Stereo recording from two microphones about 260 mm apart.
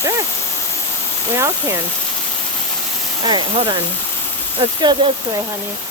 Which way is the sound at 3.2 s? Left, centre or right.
Centre.